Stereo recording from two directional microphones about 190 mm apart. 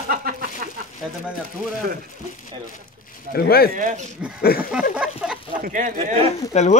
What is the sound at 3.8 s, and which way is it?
Speech, 45° right (ahead or behind).